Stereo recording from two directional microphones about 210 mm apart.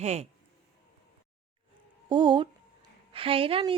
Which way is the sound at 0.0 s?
30° right (ahead or behind).